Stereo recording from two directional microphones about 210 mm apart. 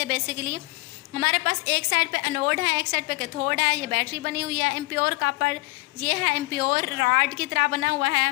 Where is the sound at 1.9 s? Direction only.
45° right (ahead or behind).